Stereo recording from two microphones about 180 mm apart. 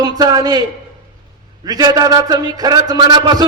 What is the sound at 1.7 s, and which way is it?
A man's voice, 20° right (ahead or behind).